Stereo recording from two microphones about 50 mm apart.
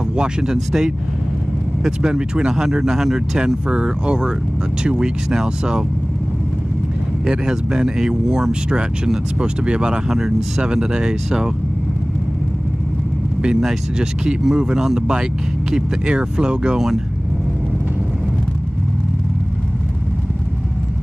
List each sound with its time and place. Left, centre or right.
0.2 s speech: centre
2.0 s speech: centre
7.2 s speech: centre
13.4 s speech: centre